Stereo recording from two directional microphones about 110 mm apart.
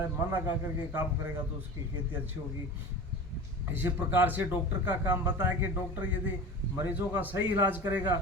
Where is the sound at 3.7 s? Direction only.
15° right (ahead or behind).